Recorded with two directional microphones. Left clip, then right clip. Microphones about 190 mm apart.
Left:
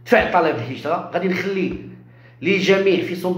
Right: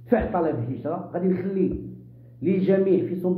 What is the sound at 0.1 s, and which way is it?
Speech, 15° left (ahead or behind).